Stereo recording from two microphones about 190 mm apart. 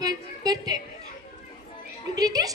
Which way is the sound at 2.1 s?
20° right (ahead or behind).